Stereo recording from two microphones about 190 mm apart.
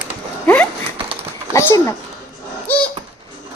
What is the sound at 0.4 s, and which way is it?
Horse, 10° left (ahead or behind).